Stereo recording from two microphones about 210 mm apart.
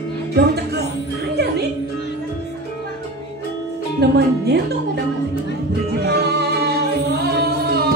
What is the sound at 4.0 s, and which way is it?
Speech, 50° right (ahead or behind).